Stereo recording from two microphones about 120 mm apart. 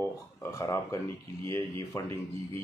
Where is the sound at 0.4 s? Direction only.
25° left (ahead or behind).